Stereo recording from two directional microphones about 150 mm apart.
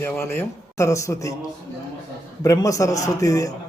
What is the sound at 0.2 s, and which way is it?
A man's voice, 15° left (ahead or behind).